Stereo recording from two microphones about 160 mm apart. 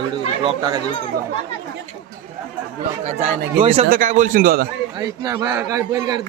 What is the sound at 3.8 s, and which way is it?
Speech, 60° right (ahead or behind).